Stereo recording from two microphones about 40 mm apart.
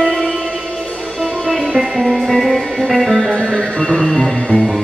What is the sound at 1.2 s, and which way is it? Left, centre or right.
Music, centre.